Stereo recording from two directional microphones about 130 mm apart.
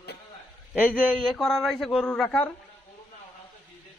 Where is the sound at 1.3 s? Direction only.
Centre (ahead or behind).